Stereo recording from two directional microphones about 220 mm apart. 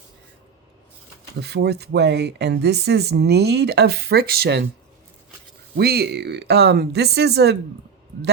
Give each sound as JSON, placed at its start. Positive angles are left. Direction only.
{"t": 1.4, "sound": "speech", "side_deg": -50}
{"t": 5.7, "sound": "speech", "side_deg": -45}